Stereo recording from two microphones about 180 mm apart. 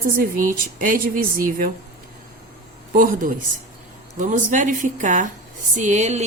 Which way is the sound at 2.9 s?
50° right (ahead or behind).